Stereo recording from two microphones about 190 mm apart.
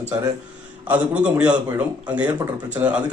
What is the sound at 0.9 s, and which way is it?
A man's voice, 5° right (ahead or behind).